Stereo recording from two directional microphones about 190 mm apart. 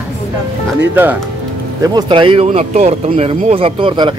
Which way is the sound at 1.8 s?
25° right (ahead or behind).